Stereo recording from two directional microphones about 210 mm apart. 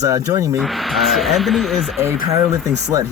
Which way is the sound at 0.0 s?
15° right (ahead or behind).